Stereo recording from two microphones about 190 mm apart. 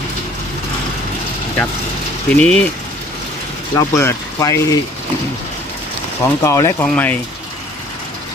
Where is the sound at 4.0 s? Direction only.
15° left (ahead or behind).